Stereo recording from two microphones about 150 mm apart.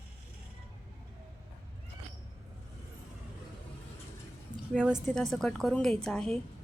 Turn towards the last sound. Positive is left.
turn(degrees=5)  # may be behind; listen again after turning